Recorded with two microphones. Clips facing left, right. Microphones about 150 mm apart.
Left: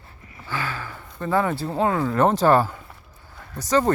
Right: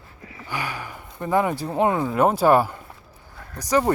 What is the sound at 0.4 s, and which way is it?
Speech, 15° right (ahead or behind).